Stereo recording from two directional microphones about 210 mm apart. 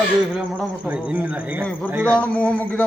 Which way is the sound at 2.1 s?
5° left (ahead or behind).